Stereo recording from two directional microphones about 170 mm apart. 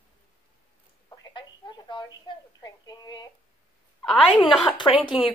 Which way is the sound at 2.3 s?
25° left (ahead or behind).